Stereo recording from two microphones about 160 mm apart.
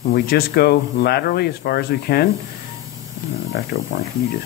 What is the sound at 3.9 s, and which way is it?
Speech, 90° left.